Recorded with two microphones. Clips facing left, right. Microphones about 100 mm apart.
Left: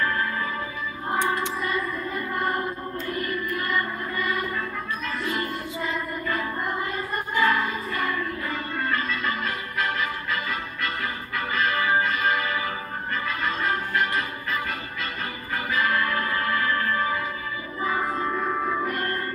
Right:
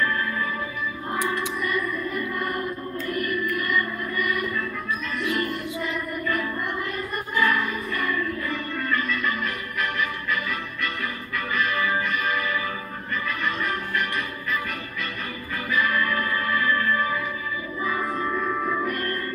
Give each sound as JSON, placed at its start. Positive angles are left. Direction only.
{"t": 0.0, "sound": "music", "side_deg": 30}
{"t": 1.6, "sound": "music", "side_deg": 30}